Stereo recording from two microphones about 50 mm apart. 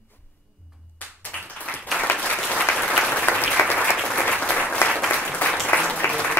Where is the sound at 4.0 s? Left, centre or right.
Centre.